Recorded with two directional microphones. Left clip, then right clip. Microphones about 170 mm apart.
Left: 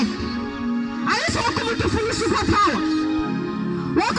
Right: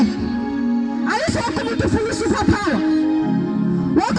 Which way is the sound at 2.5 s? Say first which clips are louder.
Left 2 dB; 45° right (ahead or behind).